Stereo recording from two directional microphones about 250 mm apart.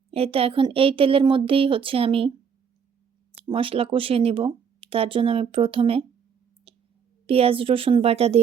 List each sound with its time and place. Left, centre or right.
0.1 s speech: right
3.3 s speech: right
6.7 s clicking: right
7.3 s speech: right